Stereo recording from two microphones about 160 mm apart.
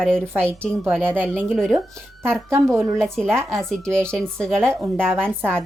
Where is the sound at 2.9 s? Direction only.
5° left (ahead or behind).